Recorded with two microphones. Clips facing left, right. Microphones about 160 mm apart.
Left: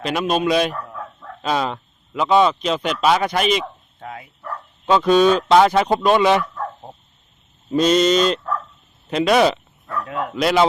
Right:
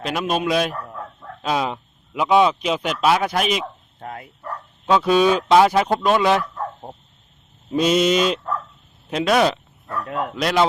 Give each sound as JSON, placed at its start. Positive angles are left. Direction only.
{"t": 0.0, "sound": "speech", "side_deg": 0}
{"t": 4.0, "sound": "speech", "side_deg": -50}
{"t": 4.9, "sound": "speech", "side_deg": -5}
{"t": 7.7, "sound": "speech", "side_deg": -5}